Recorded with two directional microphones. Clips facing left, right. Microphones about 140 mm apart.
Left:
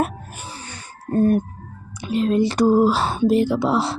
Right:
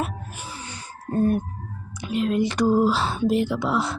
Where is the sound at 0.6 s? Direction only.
45° left (ahead or behind).